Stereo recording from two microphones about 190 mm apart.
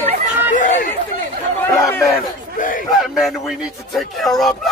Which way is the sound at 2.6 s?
45° left (ahead or behind).